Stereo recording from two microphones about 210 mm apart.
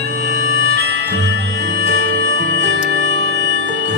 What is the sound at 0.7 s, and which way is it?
Music, 55° right (ahead or behind).